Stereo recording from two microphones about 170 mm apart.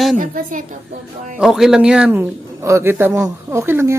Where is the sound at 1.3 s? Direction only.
5° right (ahead or behind).